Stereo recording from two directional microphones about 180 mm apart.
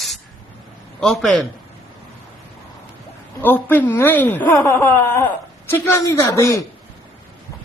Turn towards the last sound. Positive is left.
turn(degrees=15)  # may be behind; listen again after turning